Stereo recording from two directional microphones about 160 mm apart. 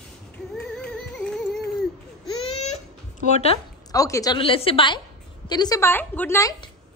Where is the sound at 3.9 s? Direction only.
20° left (ahead or behind).